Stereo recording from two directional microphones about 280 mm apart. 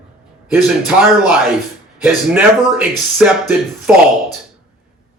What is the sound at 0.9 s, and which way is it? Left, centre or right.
Speech, centre.